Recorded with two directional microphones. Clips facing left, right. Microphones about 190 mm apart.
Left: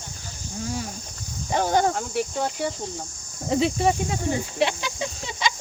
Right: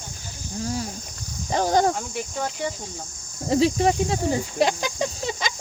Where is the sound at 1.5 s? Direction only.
35° right (ahead or behind).